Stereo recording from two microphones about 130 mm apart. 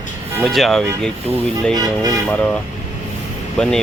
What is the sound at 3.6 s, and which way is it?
Speech, 5° left (ahead or behind).